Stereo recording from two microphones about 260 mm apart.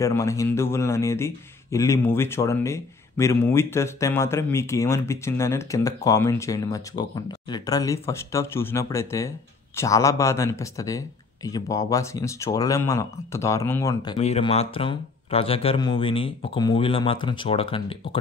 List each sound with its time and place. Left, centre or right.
0.0 s a man's voice: centre